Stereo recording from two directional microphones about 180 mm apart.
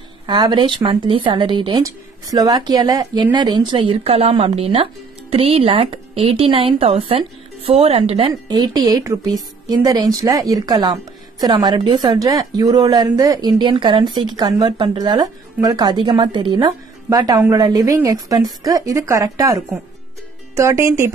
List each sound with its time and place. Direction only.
0.3 s a woman's voice: 25° right (ahead or behind)